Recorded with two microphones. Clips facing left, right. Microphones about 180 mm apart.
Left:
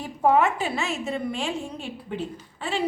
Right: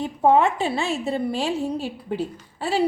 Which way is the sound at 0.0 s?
25° right (ahead or behind).